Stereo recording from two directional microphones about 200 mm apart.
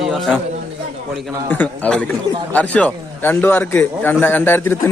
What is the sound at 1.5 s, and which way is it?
Speech, 10° left (ahead or behind).